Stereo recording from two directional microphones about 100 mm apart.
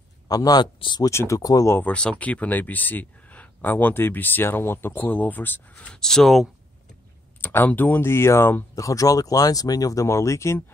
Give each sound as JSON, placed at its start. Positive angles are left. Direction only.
{"t": 0.3, "sound": "speech", "side_deg": 40}
{"t": 0.7, "sound": "speech", "side_deg": 50}
{"t": 1.0, "sound": "speech", "side_deg": 30}
{"t": 1.7, "sound": "speech", "side_deg": 15}
{"t": 7.4, "sound": "speech", "side_deg": 20}
{"t": 8.7, "sound": "speech", "side_deg": 35}